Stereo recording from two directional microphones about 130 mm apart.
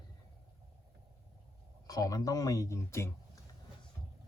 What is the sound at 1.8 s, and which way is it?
Speech, 25° left (ahead or behind).